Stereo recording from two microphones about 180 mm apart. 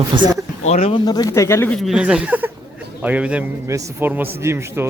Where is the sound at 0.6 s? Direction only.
40° left (ahead or behind).